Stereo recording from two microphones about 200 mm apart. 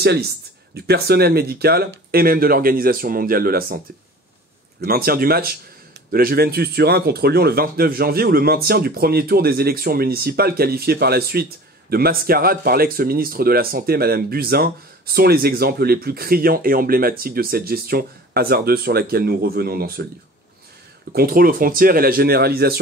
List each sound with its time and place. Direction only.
0.7 s speech: 50° right (ahead or behind)
4.8 s speech: 50° right (ahead or behind)
21.1 s speech: 50° right (ahead or behind)